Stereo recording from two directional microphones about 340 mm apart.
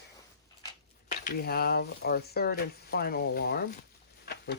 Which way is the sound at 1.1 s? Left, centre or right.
Left.